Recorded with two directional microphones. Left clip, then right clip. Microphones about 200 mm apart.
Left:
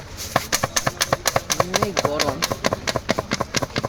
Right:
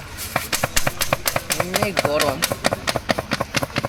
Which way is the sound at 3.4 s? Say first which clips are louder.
Right 1 dB; 20° left (ahead or behind).